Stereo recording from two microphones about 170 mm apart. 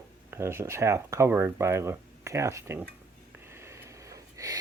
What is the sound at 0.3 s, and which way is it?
Speech, 15° right (ahead or behind).